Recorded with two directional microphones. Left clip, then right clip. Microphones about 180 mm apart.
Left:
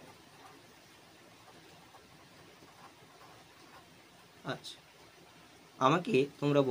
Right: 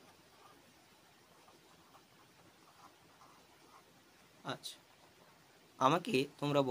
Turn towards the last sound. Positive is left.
turn(degrees=-45)  # may be behind; listen again after turning